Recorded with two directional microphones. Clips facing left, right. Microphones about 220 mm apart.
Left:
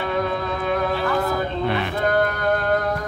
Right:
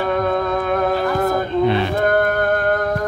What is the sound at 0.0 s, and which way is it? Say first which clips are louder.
Music: right 5 dB; 50° right (ahead or behind).